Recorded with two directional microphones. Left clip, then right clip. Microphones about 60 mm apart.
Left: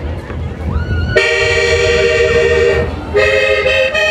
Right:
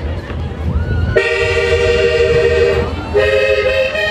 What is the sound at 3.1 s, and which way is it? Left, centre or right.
Toot, left.